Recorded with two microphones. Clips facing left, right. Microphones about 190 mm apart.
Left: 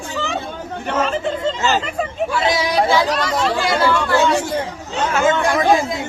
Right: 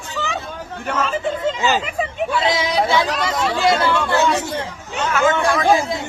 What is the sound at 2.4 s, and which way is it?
Speech, 25° right (ahead or behind).